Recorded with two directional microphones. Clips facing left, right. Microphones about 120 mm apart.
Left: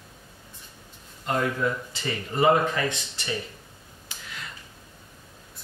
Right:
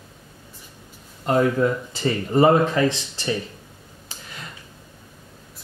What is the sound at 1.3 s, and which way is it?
Speech, 35° right (ahead or behind).